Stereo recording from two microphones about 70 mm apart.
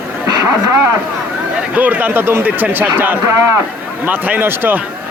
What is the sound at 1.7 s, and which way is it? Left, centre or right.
Speech, right.